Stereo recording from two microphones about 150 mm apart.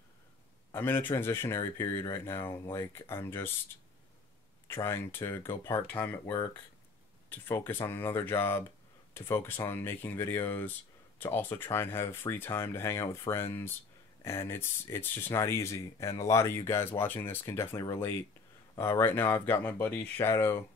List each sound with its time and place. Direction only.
0.7 s speech: 15° left (ahead or behind)
4.6 s speech: 15° left (ahead or behind)